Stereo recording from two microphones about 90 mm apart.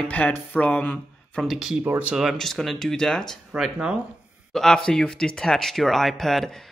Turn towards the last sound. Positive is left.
turn(degrees=5)  # may be behind; listen again after turning